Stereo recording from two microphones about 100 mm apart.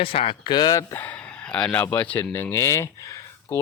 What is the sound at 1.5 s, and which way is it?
Speech, 10° left (ahead or behind).